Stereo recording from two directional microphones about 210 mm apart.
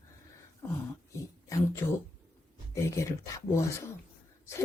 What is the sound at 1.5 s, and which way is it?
Speech, 15° left (ahead or behind).